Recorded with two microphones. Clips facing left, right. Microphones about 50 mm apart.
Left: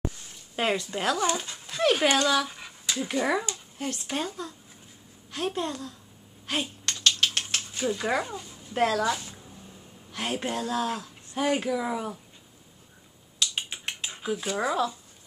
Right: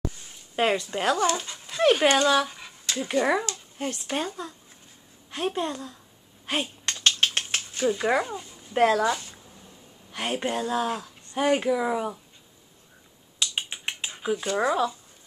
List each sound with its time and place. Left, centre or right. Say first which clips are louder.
0.6 s speech: right 3 dB; centre
2.5 s a sound: right 1 dB; centre
3.1 s speech: right 4 dB; centre
6.4 s a sound: right 2 dB; centre
7.0 s ratchet: right 1 dB; right
7.7 s a sound: right 4 dB; centre
8.0 s speech: right 3 dB; centre
13.4 s typing: right 1 dB; centre
14.3 s speech: right 3 dB; centre